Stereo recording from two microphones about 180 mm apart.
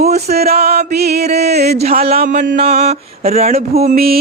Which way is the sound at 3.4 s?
35° right (ahead or behind).